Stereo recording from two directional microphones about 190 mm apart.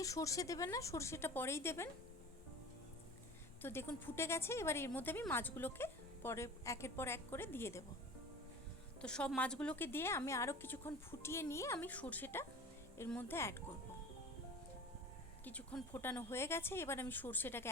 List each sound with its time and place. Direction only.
0.0 s speech: 15° left (ahead or behind)
3.6 s speech: 10° left (ahead or behind)
9.0 s speech: 5° left (ahead or behind)
15.4 s speech: 10° left (ahead or behind)